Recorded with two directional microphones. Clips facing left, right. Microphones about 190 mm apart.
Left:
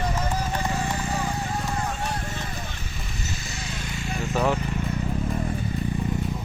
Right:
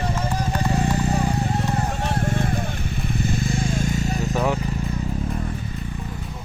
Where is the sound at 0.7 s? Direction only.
35° right (ahead or behind).